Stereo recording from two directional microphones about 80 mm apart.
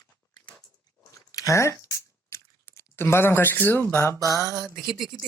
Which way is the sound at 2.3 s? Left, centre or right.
Left.